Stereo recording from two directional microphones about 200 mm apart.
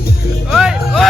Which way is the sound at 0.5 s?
Centre (ahead or behind).